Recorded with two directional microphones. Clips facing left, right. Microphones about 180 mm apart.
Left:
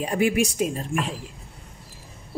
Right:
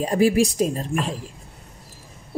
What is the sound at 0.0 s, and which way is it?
A woman's voice, 35° right (ahead or behind).